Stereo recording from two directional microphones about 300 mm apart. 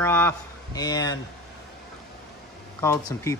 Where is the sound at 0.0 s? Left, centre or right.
Centre.